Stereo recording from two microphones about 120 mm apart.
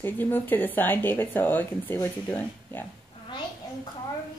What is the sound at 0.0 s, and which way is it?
Speech, 15° left (ahead or behind).